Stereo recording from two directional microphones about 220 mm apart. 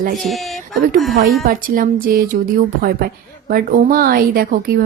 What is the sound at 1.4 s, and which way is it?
Speech, 40° right (ahead or behind).